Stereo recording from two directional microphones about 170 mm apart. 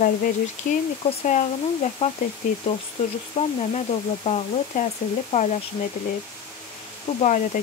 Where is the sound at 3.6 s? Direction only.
40° left (ahead or behind).